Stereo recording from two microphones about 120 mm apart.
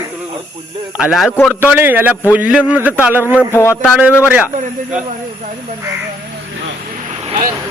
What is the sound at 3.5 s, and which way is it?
Speech, 25° left (ahead or behind).